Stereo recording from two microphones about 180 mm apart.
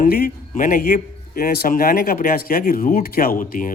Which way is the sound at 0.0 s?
55° left (ahead or behind).